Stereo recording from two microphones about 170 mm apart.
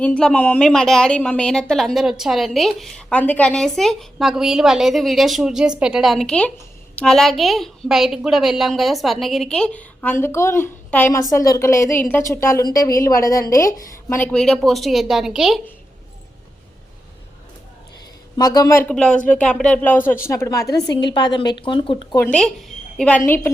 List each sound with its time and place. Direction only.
0.0 s a woman's voice: 5° left (ahead or behind)
18.3 s speech: 20° left (ahead or behind)
22.1 s speech: 15° left (ahead or behind)